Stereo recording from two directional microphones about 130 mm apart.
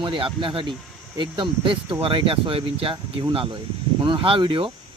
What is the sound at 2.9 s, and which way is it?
Speech, 30° right (ahead or behind).